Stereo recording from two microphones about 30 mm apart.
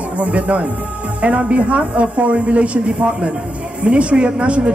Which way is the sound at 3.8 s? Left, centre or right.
Right.